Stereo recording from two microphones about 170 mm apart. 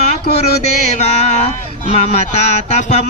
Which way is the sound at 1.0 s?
40° left (ahead or behind).